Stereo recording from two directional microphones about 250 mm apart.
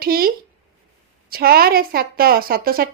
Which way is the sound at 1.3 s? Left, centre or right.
Right.